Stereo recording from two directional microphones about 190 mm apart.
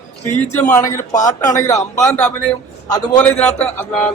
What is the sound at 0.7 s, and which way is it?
Speech, 20° left (ahead or behind).